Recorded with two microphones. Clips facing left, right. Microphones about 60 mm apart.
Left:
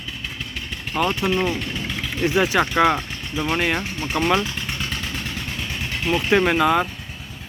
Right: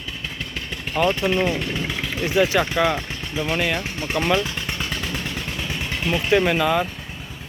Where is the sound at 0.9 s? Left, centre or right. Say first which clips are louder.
Right 1 dB; centre.